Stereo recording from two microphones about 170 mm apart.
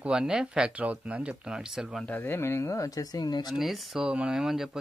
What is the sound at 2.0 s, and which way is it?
Speech, 10° left (ahead or behind).